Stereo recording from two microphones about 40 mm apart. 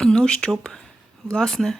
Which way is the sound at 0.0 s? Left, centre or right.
Centre.